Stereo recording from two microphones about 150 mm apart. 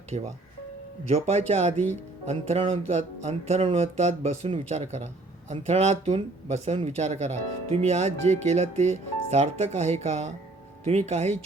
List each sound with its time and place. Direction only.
0.1 s speech: 40° right (ahead or behind)
1.7 s speech: 15° left (ahead or behind)
2.2 s speech: 45° right (ahead or behind)